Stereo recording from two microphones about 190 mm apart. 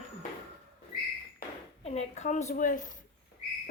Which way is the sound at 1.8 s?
35° left (ahead or behind).